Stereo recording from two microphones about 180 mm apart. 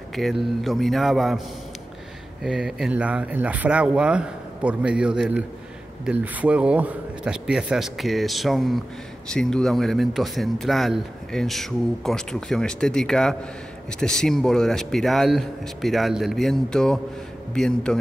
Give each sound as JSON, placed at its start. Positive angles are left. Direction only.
{"t": 0.1, "sound": "a man's voice", "side_deg": 0}
{"t": 2.4, "sound": "a man's voice", "side_deg": -5}